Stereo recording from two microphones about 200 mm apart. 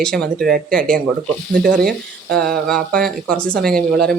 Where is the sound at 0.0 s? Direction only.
5° left (ahead or behind).